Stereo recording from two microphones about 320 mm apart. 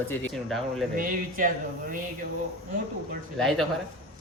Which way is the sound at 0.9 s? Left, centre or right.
Right.